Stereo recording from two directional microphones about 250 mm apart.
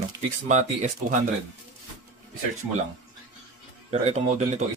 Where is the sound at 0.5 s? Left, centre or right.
Right.